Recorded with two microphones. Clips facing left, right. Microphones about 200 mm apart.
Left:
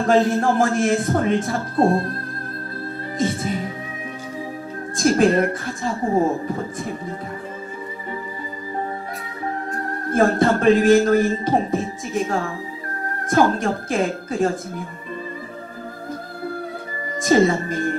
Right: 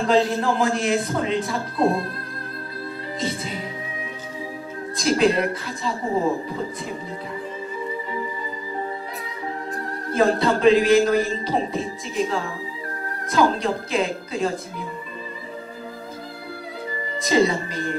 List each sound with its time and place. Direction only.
0.0 s a man's voice: 50° left (ahead or behind)
3.2 s a man's voice: 50° left (ahead or behind)
4.9 s a man's voice: 50° left (ahead or behind)
10.1 s a man's voice: 50° left (ahead or behind)
17.2 s a man's voice: 50° left (ahead or behind)